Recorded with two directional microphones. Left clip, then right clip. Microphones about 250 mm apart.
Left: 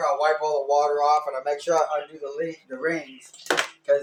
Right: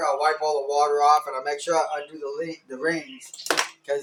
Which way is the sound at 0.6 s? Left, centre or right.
Right.